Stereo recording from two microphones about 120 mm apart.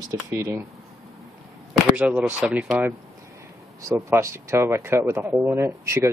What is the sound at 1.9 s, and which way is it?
Speech, 10° right (ahead or behind).